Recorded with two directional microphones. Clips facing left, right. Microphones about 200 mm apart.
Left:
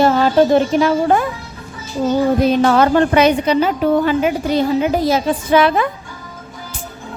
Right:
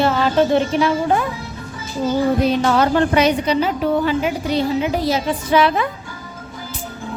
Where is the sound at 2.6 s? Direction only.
55° left (ahead or behind).